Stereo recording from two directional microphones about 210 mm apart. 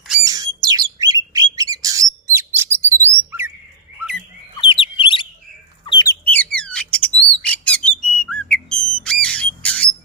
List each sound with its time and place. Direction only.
0.3 s bird: 15° right (ahead or behind)
3.1 s chirp: 10° right (ahead or behind)
4.5 s bird: 25° left (ahead or behind)
6.2 s bird: 5° left (ahead or behind)